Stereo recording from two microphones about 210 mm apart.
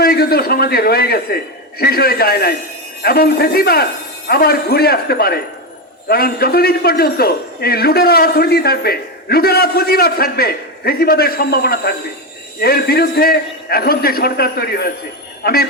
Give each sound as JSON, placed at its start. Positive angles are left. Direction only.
{"t": 0.0, "sound": "a man's voice", "side_deg": 45}